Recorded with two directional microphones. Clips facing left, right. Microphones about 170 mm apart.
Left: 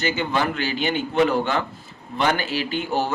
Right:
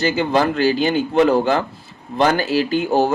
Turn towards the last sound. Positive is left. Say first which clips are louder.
# right 7 dB
turn(degrees=-40)  # may be behind; listen again after turning